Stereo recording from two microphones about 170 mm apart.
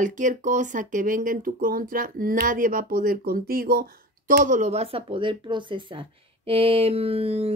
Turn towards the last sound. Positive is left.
turn(degrees=-35)  # may be behind; listen again after turning